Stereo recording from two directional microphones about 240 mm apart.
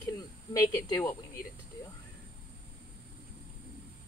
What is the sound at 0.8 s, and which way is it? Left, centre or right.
Speech, centre.